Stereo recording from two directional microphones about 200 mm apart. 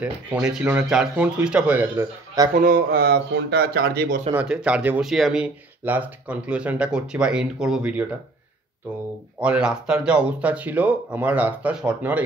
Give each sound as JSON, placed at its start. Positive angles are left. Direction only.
{"t": 0.0, "sound": "speech", "side_deg": -5}
{"t": 2.5, "sound": "speech", "side_deg": -45}
{"t": 4.3, "sound": "speech", "side_deg": -5}
{"t": 9.4, "sound": "speech", "side_deg": -5}